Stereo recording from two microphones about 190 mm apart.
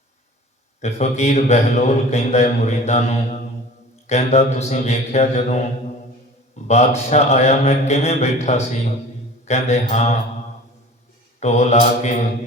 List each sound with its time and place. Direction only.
0.8 s a man's voice: 35° left (ahead or behind)
6.7 s a man's voice: 35° left (ahead or behind)
11.3 s a man's voice: 35° left (ahead or behind)